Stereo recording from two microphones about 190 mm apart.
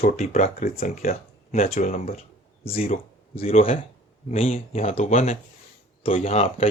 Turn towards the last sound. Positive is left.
turn(degrees=30)  # may be behind; listen again after turning